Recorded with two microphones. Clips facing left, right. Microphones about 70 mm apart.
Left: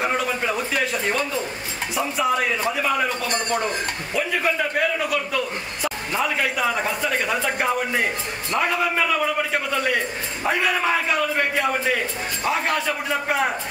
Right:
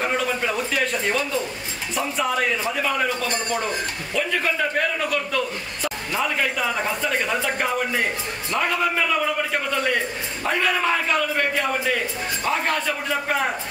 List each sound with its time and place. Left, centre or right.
0.0 s speech: centre
0.4 s a man's voice: centre
0.7 s a man's voice: centre